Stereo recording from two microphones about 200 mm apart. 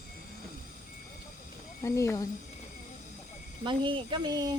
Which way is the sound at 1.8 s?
15° left (ahead or behind).